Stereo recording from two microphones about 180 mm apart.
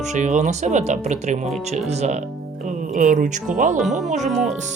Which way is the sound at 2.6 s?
45° right (ahead or behind).